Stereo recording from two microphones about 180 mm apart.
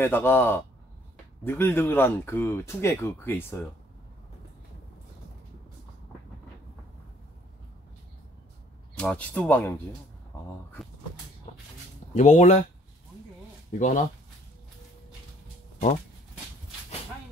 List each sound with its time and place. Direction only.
0.0 s speech: 10° left (ahead or behind)
8.9 s speech: 5° left (ahead or behind)
11.5 s a sound: 35° left (ahead or behind)
12.1 s speech: 40° left (ahead or behind)
13.7 s speech: 45° left (ahead or behind)